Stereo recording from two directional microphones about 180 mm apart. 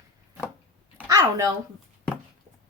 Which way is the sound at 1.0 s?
15° right (ahead or behind).